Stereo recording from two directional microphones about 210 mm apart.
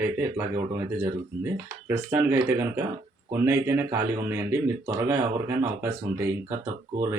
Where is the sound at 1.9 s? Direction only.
10° right (ahead or behind).